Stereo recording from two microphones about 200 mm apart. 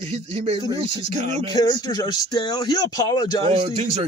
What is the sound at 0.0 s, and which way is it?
Speech, 30° right (ahead or behind).